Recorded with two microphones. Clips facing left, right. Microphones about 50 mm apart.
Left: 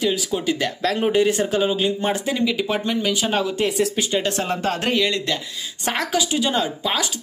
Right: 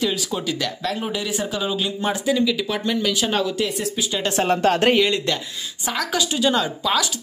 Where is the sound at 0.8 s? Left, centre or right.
Left.